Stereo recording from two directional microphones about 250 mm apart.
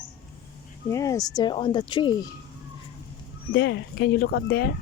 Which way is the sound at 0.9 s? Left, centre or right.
Centre.